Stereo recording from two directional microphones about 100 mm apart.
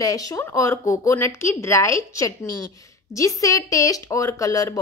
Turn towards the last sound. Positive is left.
turn(degrees=35)  # may be behind; listen again after turning